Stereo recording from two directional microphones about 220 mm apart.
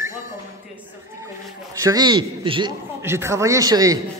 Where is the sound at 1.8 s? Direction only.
15° right (ahead or behind).